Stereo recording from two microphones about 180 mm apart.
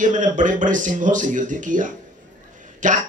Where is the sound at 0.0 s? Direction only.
45° right (ahead or behind).